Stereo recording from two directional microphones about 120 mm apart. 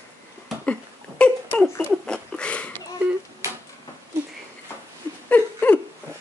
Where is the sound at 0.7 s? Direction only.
10° left (ahead or behind).